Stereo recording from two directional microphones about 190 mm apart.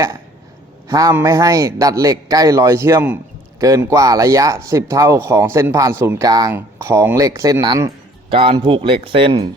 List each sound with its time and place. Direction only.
0.9 s speech: 20° right (ahead or behind)